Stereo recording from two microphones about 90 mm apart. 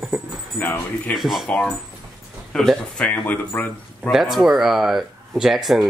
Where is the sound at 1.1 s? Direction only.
Centre (ahead or behind); by 4.1 s 20° left (ahead or behind).